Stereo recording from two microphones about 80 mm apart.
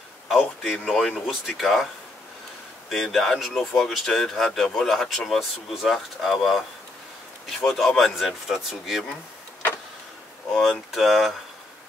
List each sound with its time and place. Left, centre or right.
0.6 s speech: centre
2.9 s speech: centre
10.5 s speech: centre